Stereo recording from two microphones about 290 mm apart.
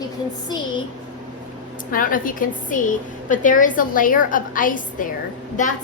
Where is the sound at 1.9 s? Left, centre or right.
Left.